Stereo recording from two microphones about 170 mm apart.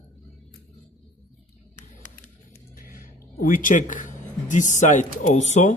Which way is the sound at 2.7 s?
55° left (ahead or behind).